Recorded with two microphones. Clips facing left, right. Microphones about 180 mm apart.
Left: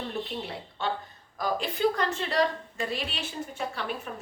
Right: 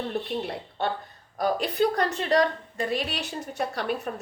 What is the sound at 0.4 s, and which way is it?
A woman's voice, 55° right (ahead or behind).